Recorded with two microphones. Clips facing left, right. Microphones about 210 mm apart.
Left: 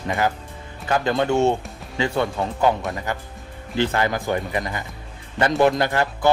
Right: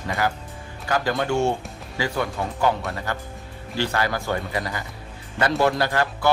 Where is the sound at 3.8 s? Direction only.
20° left (ahead or behind).